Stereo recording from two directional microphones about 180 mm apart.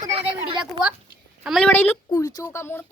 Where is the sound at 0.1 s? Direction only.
30° right (ahead or behind).